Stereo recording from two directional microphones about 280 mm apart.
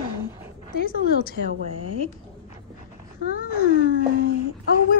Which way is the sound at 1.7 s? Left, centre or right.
Left.